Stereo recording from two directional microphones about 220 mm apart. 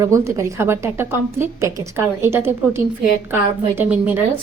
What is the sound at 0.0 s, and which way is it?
A woman's voice, 15° right (ahead or behind).